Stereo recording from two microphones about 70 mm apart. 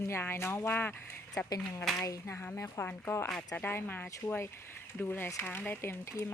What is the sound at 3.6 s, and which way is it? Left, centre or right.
Speech, left.